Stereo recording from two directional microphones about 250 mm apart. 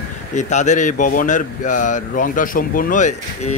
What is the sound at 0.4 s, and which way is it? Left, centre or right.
A man's voice, left.